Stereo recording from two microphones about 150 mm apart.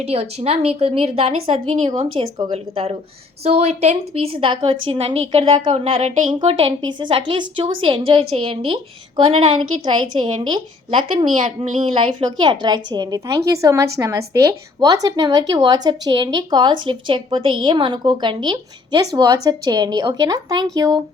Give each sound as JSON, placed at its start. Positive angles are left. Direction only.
{"t": 0.0, "sound": "a woman's voice", "side_deg": -40}